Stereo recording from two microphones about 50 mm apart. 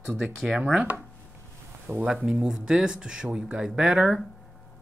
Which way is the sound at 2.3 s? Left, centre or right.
Centre.